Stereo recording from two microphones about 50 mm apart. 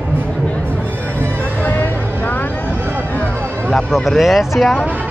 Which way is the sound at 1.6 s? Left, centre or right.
Left.